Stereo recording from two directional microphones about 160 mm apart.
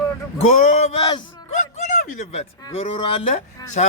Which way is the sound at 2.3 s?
40° left (ahead or behind).